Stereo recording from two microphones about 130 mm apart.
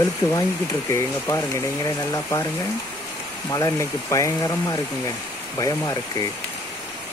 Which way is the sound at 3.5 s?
25° left (ahead or behind).